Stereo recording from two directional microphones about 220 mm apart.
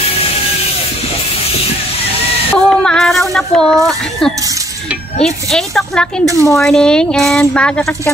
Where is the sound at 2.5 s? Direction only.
5° left (ahead or behind).